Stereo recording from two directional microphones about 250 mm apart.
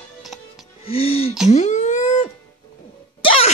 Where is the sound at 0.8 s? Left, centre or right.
Left.